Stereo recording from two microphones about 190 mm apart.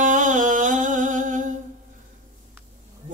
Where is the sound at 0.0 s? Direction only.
40° right (ahead or behind).